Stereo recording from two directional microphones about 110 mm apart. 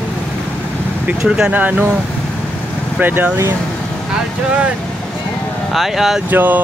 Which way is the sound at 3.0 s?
15° right (ahead or behind).